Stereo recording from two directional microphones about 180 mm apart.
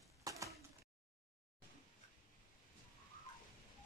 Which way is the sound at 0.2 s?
20° right (ahead or behind).